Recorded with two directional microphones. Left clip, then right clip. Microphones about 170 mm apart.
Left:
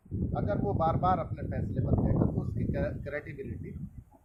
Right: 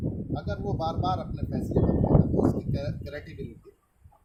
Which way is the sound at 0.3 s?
20° right (ahead or behind).